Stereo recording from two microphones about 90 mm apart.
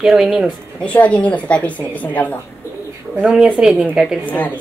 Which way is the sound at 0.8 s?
15° left (ahead or behind).